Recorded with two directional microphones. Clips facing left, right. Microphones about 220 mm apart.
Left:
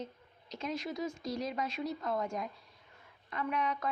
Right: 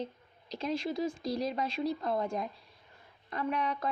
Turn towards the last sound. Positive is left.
turn(degrees=-35)  # may be behind; listen again after turning